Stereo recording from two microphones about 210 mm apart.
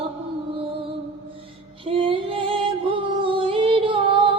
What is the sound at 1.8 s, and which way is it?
Music, 25° right (ahead or behind).